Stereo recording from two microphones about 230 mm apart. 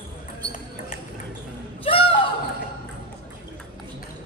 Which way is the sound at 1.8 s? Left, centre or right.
Left.